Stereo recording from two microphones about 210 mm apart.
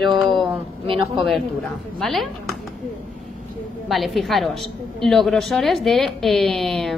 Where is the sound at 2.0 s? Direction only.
Centre (ahead or behind).